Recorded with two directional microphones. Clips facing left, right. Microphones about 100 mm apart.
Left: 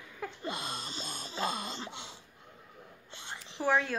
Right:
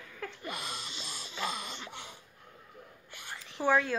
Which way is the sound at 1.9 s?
20° left (ahead or behind).